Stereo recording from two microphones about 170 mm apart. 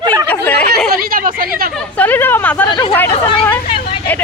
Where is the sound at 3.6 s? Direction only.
30° left (ahead or behind).